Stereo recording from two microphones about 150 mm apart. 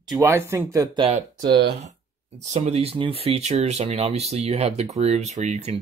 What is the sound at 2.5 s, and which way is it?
Speech, 45° right (ahead or behind).